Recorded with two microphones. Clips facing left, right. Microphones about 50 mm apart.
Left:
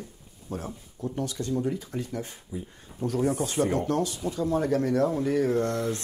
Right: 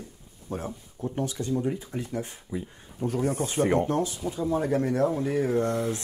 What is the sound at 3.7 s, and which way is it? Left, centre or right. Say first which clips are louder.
Speech: right 2 dB; right.